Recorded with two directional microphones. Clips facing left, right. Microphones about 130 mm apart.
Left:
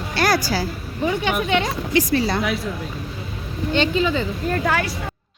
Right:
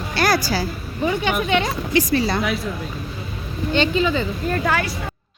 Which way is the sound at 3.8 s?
85° right.